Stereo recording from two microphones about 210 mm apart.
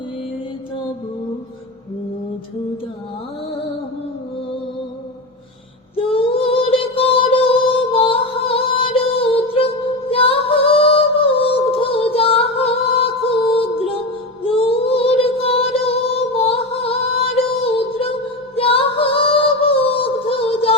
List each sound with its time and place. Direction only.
6.1 s music: 25° left (ahead or behind)
18.5 s female singing: 25° left (ahead or behind)